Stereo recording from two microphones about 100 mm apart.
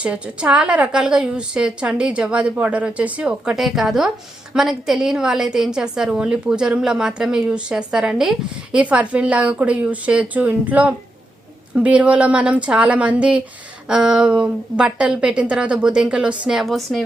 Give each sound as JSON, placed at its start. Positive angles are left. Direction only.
{"t": 0.0, "sound": "a woman's voice", "side_deg": -10}